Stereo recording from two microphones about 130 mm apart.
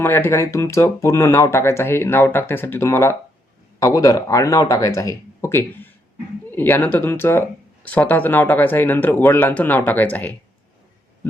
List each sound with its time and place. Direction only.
0.0 s speech: 15° left (ahead or behind)